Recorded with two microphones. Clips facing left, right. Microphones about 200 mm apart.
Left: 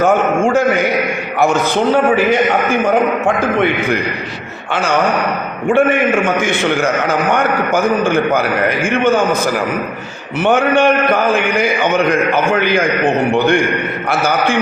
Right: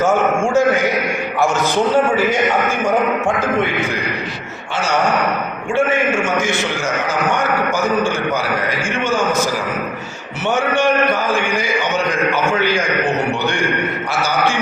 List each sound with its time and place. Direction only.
0.0 s a sound: 60° left (ahead or behind)
6.2 s a man's voice: 60° left (ahead or behind)
10.4 s a man's voice: 60° left (ahead or behind)